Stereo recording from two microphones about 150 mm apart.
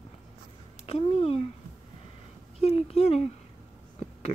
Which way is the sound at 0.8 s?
40° left (ahead or behind).